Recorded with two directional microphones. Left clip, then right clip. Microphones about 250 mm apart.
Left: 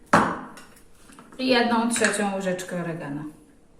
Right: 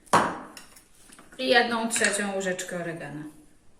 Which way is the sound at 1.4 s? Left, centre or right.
Centre.